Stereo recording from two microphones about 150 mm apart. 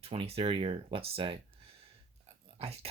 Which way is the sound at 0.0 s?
40° right (ahead or behind).